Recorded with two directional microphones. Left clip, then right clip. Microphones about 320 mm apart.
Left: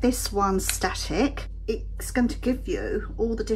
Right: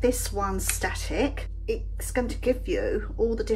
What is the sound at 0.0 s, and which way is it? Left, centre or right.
Speech, centre.